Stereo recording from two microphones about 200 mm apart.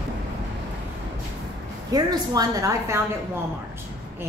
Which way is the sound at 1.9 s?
20° right (ahead or behind).